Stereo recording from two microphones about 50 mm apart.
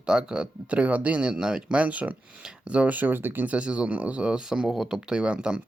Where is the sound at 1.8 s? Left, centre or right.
Right.